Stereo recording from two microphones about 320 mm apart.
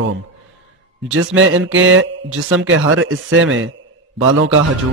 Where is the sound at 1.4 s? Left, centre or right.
Right.